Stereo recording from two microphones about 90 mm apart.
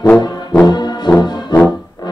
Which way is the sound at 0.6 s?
50° left (ahead or behind).